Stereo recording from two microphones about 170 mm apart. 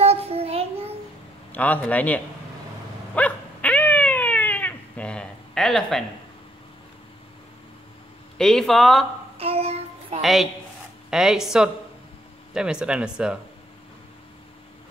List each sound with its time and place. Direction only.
0.0 s child singing: 35° right (ahead or behind)
1.5 s a man's voice: 10° left (ahead or behind)
3.2 s dog: 10° left (ahead or behind)
8.4 s speech: 5° left (ahead or behind)
9.4 s child singing: 35° right (ahead or behind)
10.2 s speech: centre (ahead or behind)